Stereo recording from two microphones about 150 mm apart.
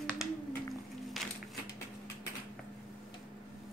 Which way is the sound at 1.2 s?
Centre (ahead or behind).